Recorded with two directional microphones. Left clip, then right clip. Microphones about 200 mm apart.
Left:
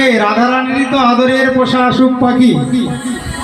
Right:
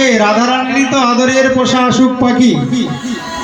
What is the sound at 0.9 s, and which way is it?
A man's voice, 40° right (ahead or behind).